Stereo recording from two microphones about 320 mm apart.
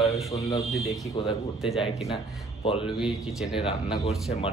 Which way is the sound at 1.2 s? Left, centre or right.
Centre.